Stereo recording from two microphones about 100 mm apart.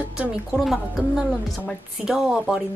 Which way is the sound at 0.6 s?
5° right (ahead or behind).